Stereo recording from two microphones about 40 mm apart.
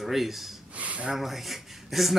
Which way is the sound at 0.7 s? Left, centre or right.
Right.